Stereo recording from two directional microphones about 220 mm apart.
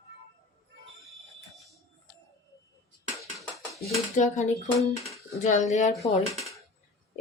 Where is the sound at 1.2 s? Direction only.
Centre (ahead or behind).